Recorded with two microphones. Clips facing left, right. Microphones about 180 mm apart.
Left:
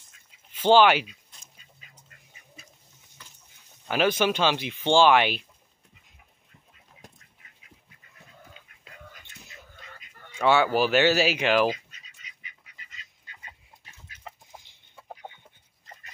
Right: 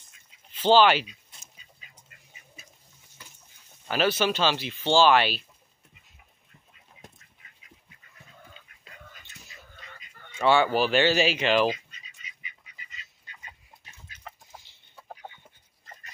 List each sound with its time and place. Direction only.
0.5 s speech: 10° left (ahead or behind)
3.9 s speech: 15° left (ahead or behind)
10.4 s speech: 10° left (ahead or behind)
14.2 s chicken: 15° left (ahead or behind)